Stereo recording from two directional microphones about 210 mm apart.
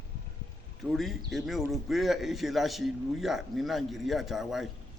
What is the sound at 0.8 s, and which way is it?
A man's voice, centre (ahead or behind).